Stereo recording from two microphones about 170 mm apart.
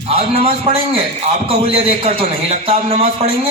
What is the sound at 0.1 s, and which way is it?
A man's voice, 35° right (ahead or behind).